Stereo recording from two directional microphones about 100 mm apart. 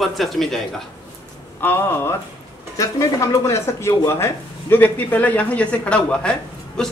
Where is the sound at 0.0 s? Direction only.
Centre (ahead or behind).